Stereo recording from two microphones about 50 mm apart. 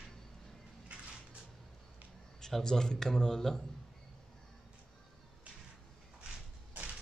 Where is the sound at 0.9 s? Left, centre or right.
Right.